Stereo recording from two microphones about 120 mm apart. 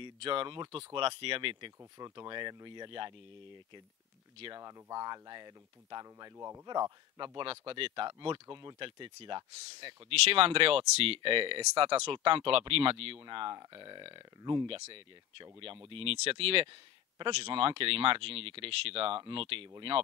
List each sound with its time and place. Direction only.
0.0 s speech: 45° right (ahead or behind)
2.0 s speech: 35° right (ahead or behind)
4.6 s speech: 30° right (ahead or behind)
6.3 s speech: 20° right (ahead or behind)
6.6 s speech: 35° right (ahead or behind)